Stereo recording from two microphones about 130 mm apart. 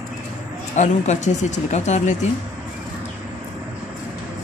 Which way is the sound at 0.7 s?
65° left (ahead or behind).